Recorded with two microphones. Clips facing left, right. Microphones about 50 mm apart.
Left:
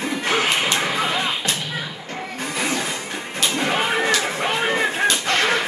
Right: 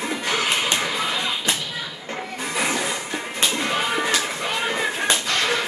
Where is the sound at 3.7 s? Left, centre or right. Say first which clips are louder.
Left 5 dB; left.